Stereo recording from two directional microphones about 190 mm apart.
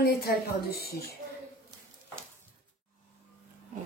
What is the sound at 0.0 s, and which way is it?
A woman's voice, 55° left (ahead or behind).